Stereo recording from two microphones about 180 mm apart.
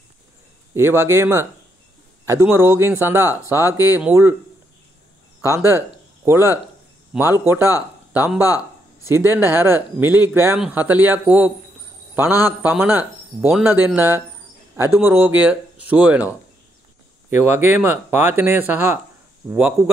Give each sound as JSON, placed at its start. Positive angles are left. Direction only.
{"t": 0.7, "sound": "speech", "side_deg": -15}
{"t": 5.4, "sound": "speech", "side_deg": -15}
{"t": 8.4, "sound": "a sound", "side_deg": 20}
{"t": 9.1, "sound": "speech", "side_deg": -10}
{"t": 17.3, "sound": "speech", "side_deg": -10}